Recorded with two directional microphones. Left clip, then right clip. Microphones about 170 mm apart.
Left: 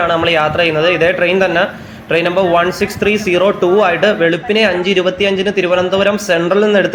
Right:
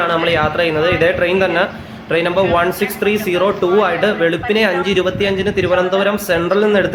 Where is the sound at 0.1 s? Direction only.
5° left (ahead or behind).